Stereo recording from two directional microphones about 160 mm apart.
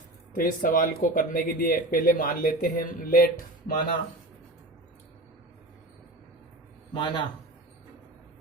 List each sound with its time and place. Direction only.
0.3 s speech: 60° left (ahead or behind)
6.9 s speech: 30° left (ahead or behind)